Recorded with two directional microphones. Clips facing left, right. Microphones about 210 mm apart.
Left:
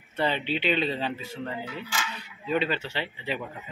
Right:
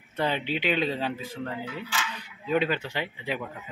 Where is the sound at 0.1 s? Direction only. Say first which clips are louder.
Even; 10° right (ahead or behind).